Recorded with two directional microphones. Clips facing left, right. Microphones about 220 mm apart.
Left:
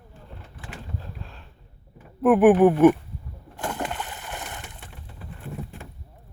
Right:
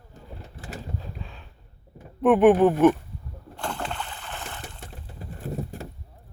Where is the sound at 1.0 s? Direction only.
Centre (ahead or behind).